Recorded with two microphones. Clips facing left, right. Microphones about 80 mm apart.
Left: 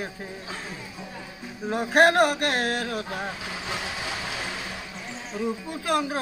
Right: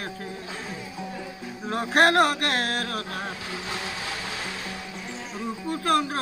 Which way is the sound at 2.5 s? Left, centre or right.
Left.